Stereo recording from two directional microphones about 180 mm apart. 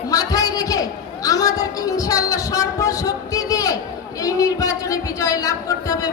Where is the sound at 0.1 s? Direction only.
20° left (ahead or behind).